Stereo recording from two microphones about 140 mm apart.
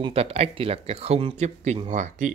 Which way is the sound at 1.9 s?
60° right (ahead or behind).